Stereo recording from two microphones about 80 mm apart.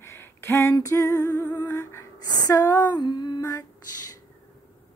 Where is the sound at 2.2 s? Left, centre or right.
Left.